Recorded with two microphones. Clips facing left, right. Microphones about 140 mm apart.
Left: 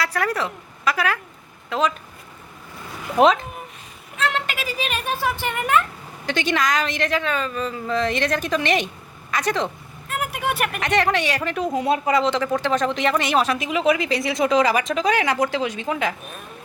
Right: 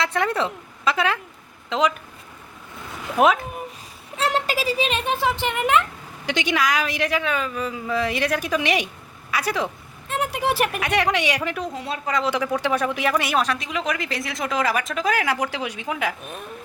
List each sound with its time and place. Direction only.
0.0 s a woman's voice: 25° right (ahead or behind)
3.2 s speech: 5° right (ahead or behind)
4.2 s speech: 35° right (ahead or behind); by 9.6 s 10° right (ahead or behind)
10.1 s vehicle: 30° right (ahead or behind)
10.7 s speech: 5° right (ahead or behind)
11.7 s speech: 20° left (ahead or behind)
12.2 s speech: 10° right (ahead or behind)